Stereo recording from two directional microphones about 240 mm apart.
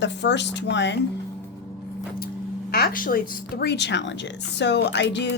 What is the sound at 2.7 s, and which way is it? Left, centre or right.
A woman's voice, left.